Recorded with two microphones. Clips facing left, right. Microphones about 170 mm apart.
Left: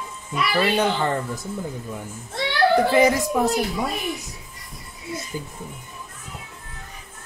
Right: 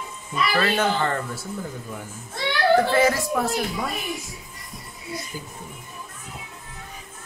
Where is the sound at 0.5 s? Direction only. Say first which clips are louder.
Left 2 dB; 15° left (ahead or behind).